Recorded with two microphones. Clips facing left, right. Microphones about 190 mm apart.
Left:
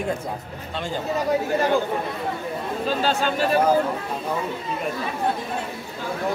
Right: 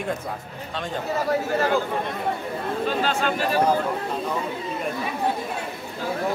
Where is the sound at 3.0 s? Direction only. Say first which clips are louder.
Left 2 dB; 30° left (ahead or behind).